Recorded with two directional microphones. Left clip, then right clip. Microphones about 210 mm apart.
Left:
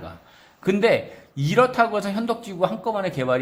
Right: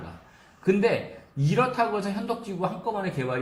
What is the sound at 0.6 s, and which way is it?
A man's voice, 40° left (ahead or behind).